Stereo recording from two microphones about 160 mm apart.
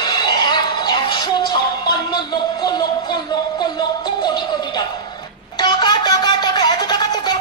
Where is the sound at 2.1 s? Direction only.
25° left (ahead or behind).